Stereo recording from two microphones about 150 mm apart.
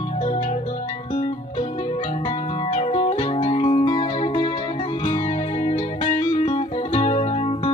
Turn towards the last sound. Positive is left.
turn(degrees=40)  # may be behind; listen again after turning